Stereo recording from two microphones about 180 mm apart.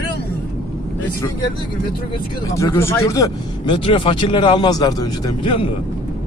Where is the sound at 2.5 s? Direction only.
15° left (ahead or behind).